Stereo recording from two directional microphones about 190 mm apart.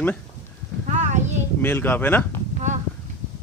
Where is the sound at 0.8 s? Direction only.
35° right (ahead or behind).